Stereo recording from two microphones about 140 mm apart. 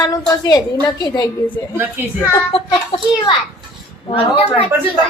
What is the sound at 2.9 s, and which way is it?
A woman's voice, 40° left (ahead or behind).